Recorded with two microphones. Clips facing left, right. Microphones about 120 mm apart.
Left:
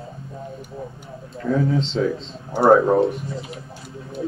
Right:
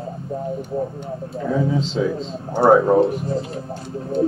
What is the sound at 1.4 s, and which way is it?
Speech, centre (ahead or behind).